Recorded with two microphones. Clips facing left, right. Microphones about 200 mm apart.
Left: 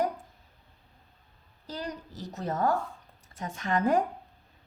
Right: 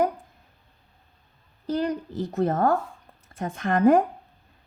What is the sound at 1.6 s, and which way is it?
A woman's voice, 55° right (ahead or behind).